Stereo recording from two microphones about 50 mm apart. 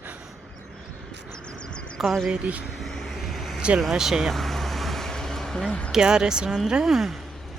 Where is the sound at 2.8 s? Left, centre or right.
Centre.